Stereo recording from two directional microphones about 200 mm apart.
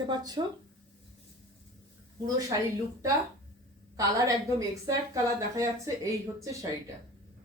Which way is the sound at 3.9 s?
15° right (ahead or behind).